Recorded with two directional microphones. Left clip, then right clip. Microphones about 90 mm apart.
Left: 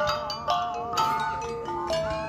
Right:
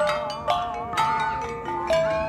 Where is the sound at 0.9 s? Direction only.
25° left (ahead or behind).